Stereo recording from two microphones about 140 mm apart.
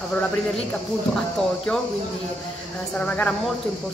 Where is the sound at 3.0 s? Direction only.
10° left (ahead or behind).